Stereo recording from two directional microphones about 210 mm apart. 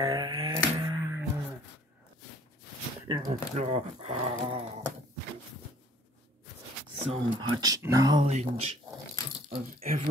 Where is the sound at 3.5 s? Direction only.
30° right (ahead or behind).